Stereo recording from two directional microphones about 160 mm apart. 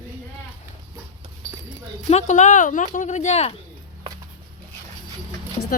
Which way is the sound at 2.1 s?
45° left (ahead or behind).